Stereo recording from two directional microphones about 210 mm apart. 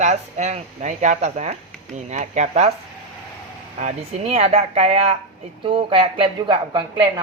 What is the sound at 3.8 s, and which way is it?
Speech, 30° right (ahead or behind).